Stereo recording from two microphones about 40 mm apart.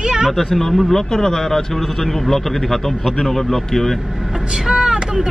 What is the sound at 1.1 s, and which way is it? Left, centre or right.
A man's voice, centre.